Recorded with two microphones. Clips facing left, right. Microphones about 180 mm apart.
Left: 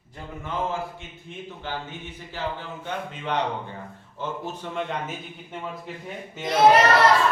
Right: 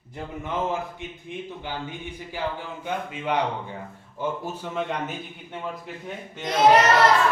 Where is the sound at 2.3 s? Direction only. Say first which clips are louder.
Right 1 dB; 10° right (ahead or behind).